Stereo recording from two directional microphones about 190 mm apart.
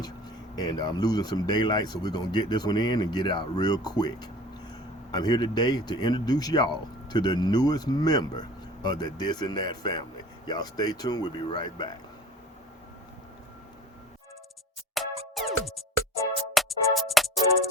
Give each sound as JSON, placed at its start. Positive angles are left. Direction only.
{"t": 0.5, "sound": "speech", "side_deg": 20}
{"t": 15.0, "sound": "music", "side_deg": 0}
{"t": 16.6, "sound": "music", "side_deg": 0}